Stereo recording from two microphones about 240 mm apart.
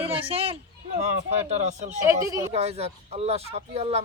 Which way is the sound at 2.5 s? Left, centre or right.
Right.